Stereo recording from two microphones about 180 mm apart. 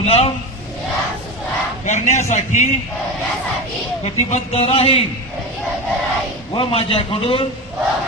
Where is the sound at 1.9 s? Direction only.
40° left (ahead or behind).